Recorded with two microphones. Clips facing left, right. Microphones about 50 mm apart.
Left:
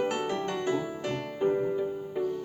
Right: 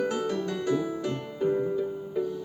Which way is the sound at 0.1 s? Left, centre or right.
Left.